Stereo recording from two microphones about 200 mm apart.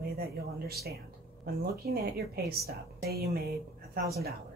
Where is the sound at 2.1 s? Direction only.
50° right (ahead or behind).